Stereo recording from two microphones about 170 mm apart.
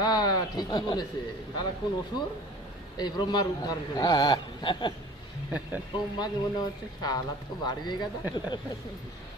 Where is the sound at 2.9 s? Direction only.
25° left (ahead or behind).